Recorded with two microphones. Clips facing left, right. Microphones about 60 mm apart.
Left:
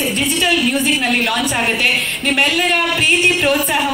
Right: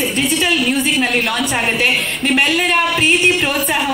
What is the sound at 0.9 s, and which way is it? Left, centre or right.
Speech, centre.